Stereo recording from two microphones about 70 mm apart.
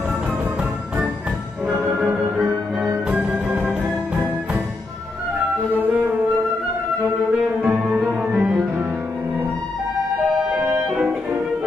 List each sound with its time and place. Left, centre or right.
1.7 s music: centre
3.1 s music: centre
8.3 s music: right
10.5 s music: centre